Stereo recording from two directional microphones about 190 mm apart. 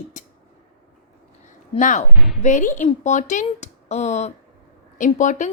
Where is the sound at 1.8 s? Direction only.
40° left (ahead or behind).